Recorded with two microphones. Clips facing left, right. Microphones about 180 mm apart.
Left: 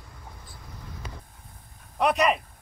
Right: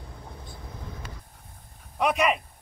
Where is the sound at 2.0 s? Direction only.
Centre (ahead or behind).